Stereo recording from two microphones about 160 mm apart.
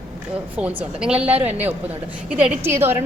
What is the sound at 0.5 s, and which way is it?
A woman's voice, 10° right (ahead or behind).